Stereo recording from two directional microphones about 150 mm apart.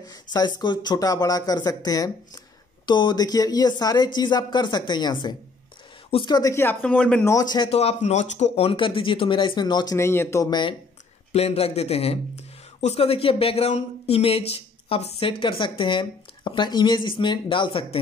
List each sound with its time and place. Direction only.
0.1 s speech: 25° left (ahead or behind); by 7.2 s 10° left (ahead or behind)
7.2 s speech: 25° left (ahead or behind)
7.7 s a man's voice: 45° left (ahead or behind); by 10.8 s 30° left (ahead or behind)
11.3 s a man's voice: 40° left (ahead or behind)